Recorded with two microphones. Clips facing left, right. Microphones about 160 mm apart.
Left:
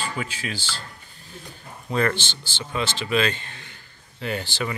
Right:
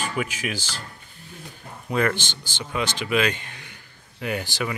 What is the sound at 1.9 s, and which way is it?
Speech, 10° right (ahead or behind).